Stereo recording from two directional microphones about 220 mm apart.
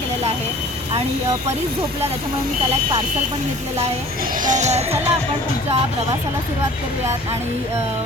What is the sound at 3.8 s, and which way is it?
Speech, 40° right (ahead or behind).